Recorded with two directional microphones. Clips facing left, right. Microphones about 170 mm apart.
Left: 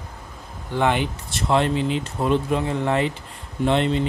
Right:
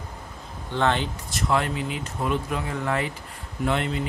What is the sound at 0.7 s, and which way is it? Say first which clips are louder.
Speech: left 3 dB; 15° left (ahead or behind).